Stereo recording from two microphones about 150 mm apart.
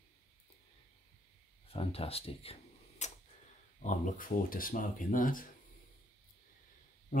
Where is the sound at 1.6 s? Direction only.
40° left (ahead or behind).